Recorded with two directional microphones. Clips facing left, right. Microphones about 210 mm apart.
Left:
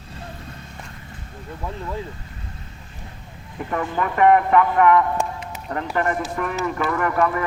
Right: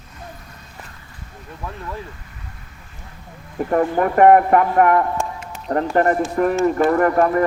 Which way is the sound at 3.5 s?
40° right (ahead or behind).